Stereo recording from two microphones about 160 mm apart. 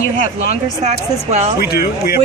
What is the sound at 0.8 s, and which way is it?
Speech, 45° right (ahead or behind).